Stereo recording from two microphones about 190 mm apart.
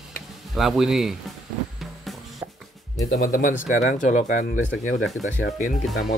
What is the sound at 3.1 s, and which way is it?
Speech, 55° left (ahead or behind).